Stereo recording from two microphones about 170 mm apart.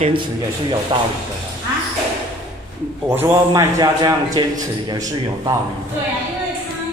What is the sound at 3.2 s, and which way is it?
A man's voice, 15° right (ahead or behind).